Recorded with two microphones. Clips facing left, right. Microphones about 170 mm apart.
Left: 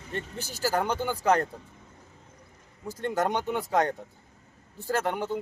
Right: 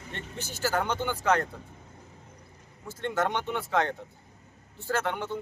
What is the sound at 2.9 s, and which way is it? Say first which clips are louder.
Speech: left 1 dB; 40° left (ahead or behind).